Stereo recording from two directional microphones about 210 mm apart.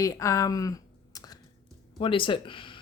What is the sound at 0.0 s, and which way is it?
Speech, 15° left (ahead or behind).